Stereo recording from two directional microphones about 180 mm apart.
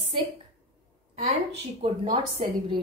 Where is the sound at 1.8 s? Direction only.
30° right (ahead or behind).